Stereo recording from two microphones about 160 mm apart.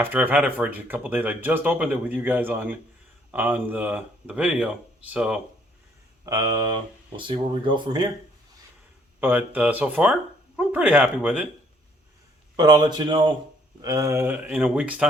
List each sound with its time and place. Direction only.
0.0 s speech: 10° right (ahead or behind)
6.2 s speech: 25° right (ahead or behind)
9.2 s speech: 10° right (ahead or behind)
12.5 s speech: 25° right (ahead or behind); by 15.0 s 10° right (ahead or behind)